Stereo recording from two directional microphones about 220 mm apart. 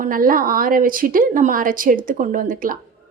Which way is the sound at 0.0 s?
40° right (ahead or behind).